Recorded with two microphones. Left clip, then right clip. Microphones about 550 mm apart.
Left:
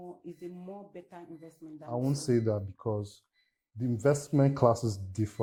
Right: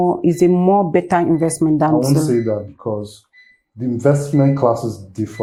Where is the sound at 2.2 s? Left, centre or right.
Left.